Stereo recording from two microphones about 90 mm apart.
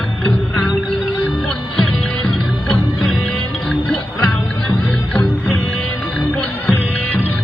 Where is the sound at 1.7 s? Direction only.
10° left (ahead or behind).